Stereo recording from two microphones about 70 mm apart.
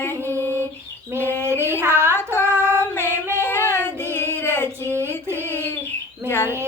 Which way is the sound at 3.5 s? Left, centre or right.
Left.